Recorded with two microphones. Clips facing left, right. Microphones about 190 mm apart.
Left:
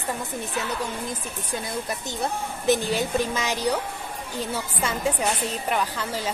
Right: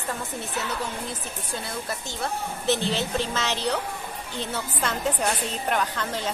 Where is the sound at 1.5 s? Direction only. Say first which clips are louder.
Left 3 dB; 15° left (ahead or behind).